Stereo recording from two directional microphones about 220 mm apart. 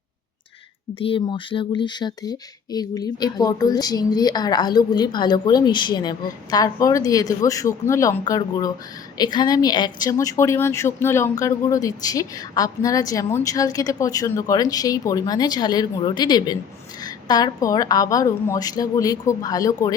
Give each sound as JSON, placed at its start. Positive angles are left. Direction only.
{"t": 0.9, "sound": "speech", "side_deg": 25}